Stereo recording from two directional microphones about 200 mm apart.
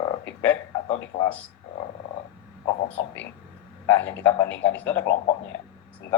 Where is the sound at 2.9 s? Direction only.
5° left (ahead or behind).